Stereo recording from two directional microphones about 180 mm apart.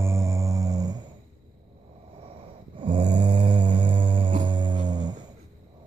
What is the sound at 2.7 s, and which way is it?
Snoring, 25° right (ahead or behind).